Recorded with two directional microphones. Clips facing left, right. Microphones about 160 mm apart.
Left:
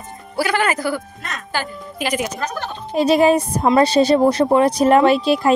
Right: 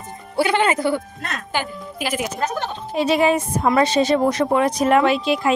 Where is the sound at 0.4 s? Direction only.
25° right (ahead or behind).